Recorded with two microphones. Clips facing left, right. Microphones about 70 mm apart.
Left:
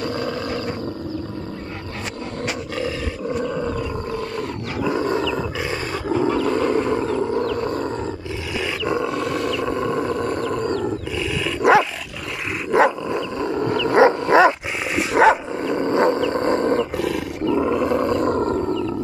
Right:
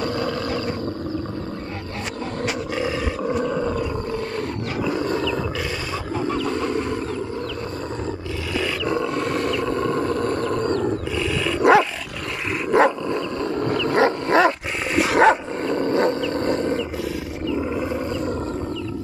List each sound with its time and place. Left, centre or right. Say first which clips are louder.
0.1 s roaring cats: right 1 dB; left
4.8 s roaring cats: left 3 dB; left
5.2 s wild animals: left 1 dB; centre
8.5 s roar: even; centre
9.1 s wild animals: even; right
9.7 s a sound: even; centre
10.8 s roar: right 1 dB; centre
12.7 s dog: left 1 dB; centre
15.2 s dog: left 1 dB; centre
15.6 s roaring cats: left 2 dB; centre; by 16.8 s left
16.9 s roaring cats: left 4 dB; left